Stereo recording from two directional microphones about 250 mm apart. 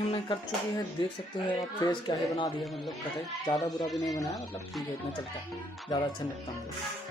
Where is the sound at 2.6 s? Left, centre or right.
Centre.